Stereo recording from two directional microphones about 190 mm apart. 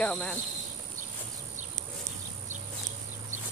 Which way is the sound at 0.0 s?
5° left (ahead or behind).